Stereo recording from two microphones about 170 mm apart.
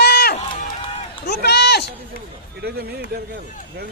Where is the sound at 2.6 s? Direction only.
70° right (ahead or behind).